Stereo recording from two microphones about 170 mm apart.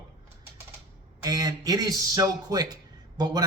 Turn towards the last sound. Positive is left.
turn(degrees=-25)  # may be behind; listen again after turning